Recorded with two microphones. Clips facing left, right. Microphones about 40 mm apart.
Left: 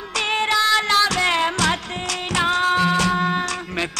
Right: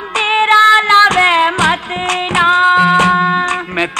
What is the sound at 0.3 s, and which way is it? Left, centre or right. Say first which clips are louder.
Music: right 11 dB; right.